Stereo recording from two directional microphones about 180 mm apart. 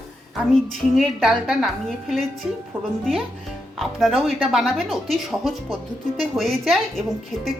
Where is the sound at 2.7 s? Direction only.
10° right (ahead or behind).